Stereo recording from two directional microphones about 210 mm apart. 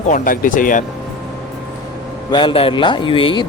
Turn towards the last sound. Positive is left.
turn(degrees=25)  # may be behind; listen again after turning